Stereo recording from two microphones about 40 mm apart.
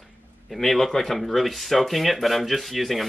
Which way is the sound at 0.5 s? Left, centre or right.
Centre.